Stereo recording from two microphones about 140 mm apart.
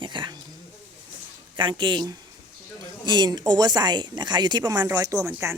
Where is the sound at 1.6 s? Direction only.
35° right (ahead or behind).